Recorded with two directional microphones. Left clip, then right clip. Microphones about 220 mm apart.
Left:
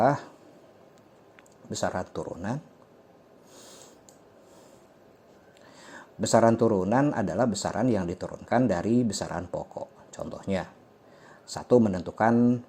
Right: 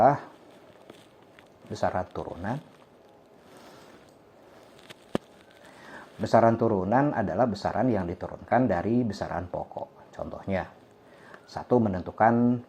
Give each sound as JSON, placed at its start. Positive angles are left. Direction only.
{"t": 0.0, "sound": "speech", "side_deg": 45}
{"t": 1.7, "sound": "speech", "side_deg": 45}
{"t": 5.8, "sound": "speech", "side_deg": 50}